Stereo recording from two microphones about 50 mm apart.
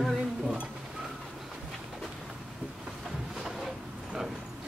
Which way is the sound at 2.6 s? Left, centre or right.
Centre.